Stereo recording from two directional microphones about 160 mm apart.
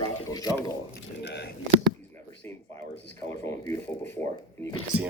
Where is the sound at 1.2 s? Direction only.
90° left.